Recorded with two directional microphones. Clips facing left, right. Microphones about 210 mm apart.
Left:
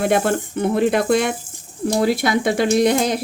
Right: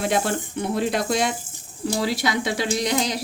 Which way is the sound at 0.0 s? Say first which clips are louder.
Left 5 dB; 55° left (ahead or behind).